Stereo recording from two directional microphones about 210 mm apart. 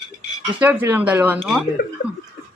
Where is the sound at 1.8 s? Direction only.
45° left (ahead or behind).